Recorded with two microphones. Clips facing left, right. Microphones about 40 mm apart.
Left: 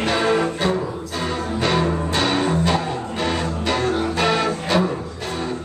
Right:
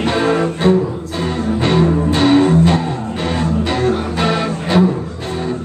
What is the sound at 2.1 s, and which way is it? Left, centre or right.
Music, centre.